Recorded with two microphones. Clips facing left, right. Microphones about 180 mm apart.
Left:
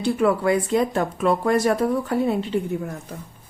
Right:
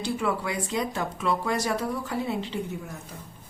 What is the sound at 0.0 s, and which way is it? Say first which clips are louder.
Speech: left 8 dB; 55° left (ahead or behind).